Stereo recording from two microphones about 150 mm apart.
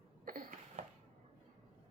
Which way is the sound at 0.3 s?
60° right (ahead or behind).